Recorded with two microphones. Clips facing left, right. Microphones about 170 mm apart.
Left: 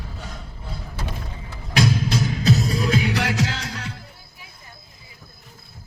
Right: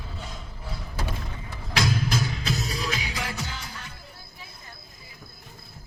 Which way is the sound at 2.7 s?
50° left (ahead or behind).